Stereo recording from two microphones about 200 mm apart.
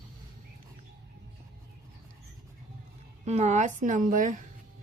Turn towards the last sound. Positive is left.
turn(degrees=-40)  # may be behind; listen again after turning